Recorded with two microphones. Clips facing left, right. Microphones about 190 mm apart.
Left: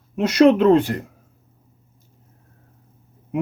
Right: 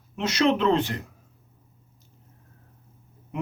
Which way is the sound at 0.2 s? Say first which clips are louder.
Left 8 dB; 55° left (ahead or behind).